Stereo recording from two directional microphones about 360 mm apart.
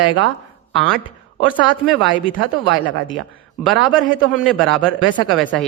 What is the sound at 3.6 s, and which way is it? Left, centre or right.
A man's voice, centre.